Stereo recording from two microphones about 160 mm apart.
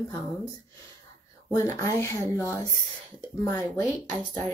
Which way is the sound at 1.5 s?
15° left (ahead or behind).